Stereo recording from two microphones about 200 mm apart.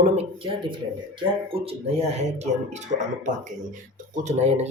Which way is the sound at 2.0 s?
35° right (ahead or behind).